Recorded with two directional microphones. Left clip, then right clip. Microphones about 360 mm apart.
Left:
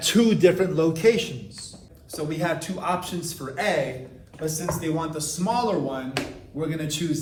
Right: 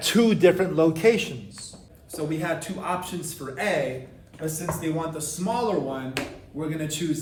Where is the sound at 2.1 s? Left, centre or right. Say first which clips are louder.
Left 1 dB; centre.